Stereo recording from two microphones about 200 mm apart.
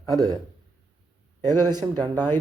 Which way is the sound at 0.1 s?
15° right (ahead or behind).